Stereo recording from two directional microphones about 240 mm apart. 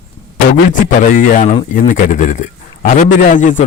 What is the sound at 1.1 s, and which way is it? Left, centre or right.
A man's voice, left.